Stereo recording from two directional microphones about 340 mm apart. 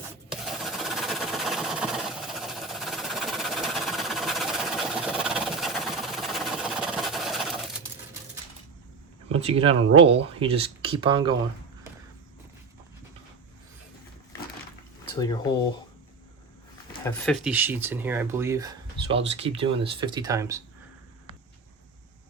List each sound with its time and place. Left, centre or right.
0.3 s engine: centre
9.4 s speech: centre
15.1 s speech: centre
17.0 s speech: centre